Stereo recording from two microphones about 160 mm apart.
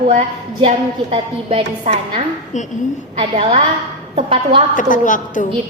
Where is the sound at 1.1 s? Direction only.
35° right (ahead or behind).